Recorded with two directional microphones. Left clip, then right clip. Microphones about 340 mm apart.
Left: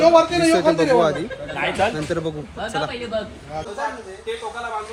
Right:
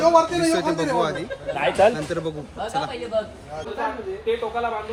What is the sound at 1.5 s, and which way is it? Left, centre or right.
Speech, right.